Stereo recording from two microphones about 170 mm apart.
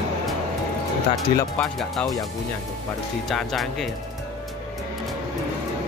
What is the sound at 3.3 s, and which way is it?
Speech, centre (ahead or behind).